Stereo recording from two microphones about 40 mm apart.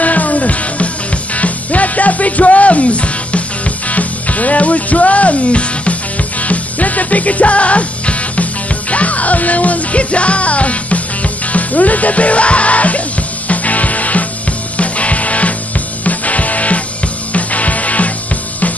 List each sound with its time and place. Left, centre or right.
0.0 s music: left